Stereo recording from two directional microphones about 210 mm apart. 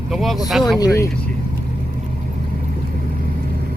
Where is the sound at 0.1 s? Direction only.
Centre (ahead or behind).